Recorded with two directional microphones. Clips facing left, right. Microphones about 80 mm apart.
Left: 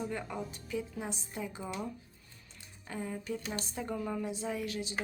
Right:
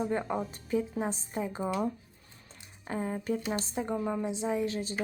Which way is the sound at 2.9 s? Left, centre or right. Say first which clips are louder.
Right 6 dB; right.